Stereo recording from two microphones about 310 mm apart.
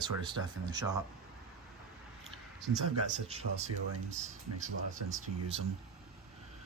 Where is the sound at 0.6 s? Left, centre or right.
Centre.